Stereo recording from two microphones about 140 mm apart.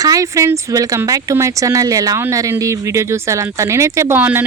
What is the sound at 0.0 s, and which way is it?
Speech, 25° right (ahead or behind).